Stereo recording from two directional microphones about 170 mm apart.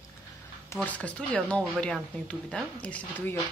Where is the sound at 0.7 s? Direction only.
10° left (ahead or behind).